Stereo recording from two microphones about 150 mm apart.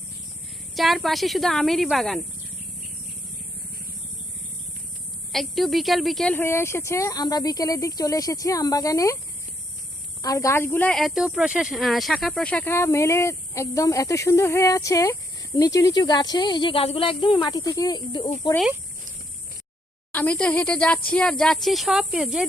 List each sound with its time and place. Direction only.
0.8 s speech: centre (ahead or behind)
5.3 s speech: centre (ahead or behind)
6.3 s speech: 15° left (ahead or behind)
10.2 s speech: 20° left (ahead or behind)
20.1 s speech: 10° left (ahead or behind)